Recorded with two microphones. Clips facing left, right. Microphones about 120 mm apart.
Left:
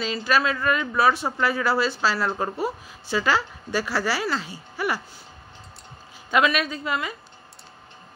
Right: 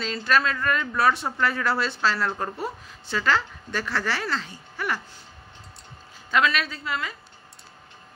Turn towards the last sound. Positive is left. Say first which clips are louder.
# left 3 dB
turn(degrees=15)  # may be behind; listen again after turning